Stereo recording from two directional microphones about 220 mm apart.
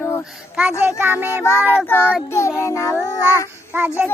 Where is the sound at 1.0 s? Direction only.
10° right (ahead or behind).